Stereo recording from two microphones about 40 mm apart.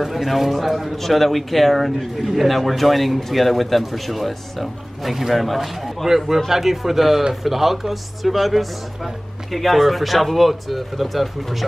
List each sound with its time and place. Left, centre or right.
0.0 s speech: centre